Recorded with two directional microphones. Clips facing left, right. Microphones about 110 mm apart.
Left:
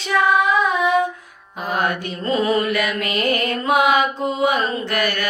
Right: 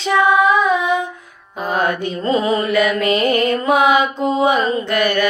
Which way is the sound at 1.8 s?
30° right (ahead or behind).